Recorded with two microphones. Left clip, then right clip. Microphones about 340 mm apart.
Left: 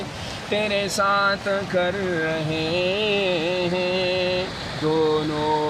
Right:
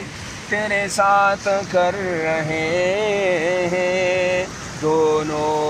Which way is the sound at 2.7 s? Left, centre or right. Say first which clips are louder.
Right 3 dB; right.